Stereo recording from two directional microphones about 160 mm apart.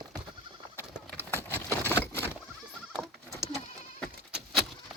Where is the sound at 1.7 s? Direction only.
15° left (ahead or behind).